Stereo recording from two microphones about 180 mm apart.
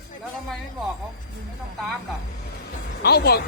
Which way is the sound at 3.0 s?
60° left (ahead or behind).